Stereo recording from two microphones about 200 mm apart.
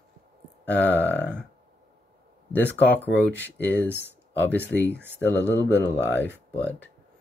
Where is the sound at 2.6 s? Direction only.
10° left (ahead or behind).